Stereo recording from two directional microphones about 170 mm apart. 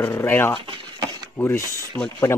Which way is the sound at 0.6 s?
25° right (ahead or behind).